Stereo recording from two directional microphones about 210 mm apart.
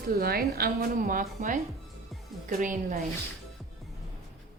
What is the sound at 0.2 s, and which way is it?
A woman's voice, 45° right (ahead or behind).